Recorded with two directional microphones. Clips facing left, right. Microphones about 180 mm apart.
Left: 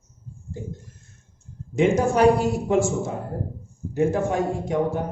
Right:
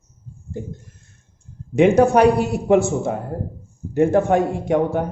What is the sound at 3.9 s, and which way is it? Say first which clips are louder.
Speech: right 6 dB; 60° right (ahead or behind).